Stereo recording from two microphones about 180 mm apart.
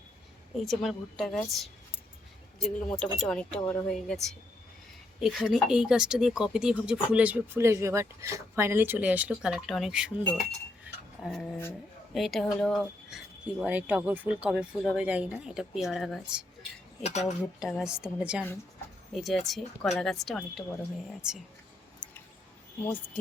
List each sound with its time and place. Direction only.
0.5 s speech: centre (ahead or behind)
10.8 s cutlery: centre (ahead or behind)
12.1 s speech: centre (ahead or behind)
17.0 s speech: 40° left (ahead or behind)
17.6 s speech: centre (ahead or behind)
22.8 s speech: 10° left (ahead or behind)